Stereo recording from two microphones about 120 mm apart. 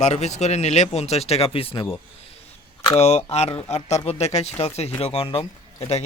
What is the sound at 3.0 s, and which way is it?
Speech, 65° left (ahead or behind).